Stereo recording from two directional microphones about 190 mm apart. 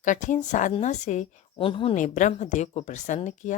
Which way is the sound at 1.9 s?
40° left (ahead or behind).